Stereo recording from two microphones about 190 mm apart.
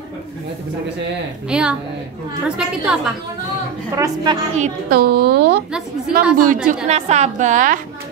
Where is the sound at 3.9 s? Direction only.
20° right (ahead or behind).